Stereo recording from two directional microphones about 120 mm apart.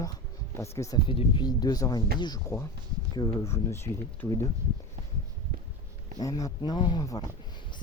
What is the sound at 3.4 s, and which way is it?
Speech, 20° left (ahead or behind).